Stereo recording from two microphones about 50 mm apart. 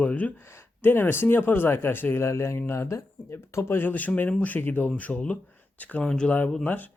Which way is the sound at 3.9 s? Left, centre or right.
Left.